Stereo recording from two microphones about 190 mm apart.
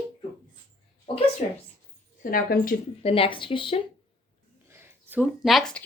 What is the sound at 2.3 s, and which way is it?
Speech, 50° left (ahead or behind).